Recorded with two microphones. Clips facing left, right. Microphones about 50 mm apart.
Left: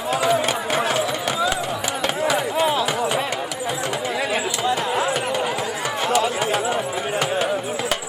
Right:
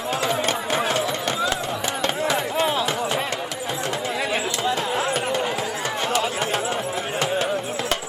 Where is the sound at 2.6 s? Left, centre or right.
Centre.